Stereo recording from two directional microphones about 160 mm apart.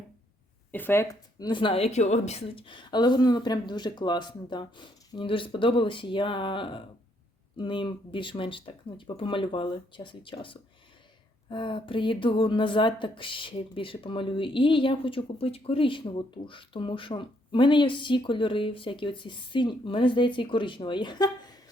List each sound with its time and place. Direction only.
0.7 s speech: 10° left (ahead or behind)
1.4 s speech: 30° left (ahead or behind)